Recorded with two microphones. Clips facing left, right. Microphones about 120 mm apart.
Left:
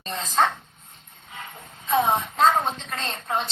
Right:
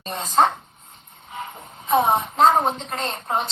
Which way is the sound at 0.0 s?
25° right (ahead or behind).